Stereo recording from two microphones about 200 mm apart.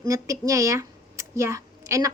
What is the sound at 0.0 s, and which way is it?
Speech, 15° right (ahead or behind).